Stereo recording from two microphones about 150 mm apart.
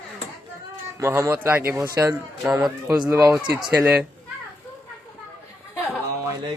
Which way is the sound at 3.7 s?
5° right (ahead or behind).